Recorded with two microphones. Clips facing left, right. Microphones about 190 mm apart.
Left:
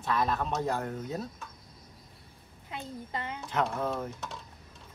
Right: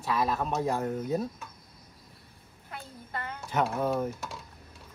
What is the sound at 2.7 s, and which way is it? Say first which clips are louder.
Speech: left 2 dB; 20° left (ahead or behind).